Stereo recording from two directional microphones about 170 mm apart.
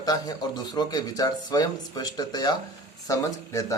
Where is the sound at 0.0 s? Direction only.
25° left (ahead or behind).